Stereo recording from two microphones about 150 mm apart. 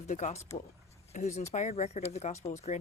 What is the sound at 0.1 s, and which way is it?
Speech, 55° left (ahead or behind).